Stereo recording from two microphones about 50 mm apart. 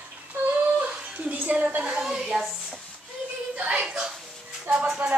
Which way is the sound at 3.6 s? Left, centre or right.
Right.